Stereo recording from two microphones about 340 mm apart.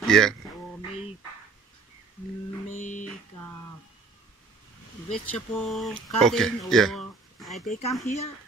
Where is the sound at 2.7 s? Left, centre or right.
Left.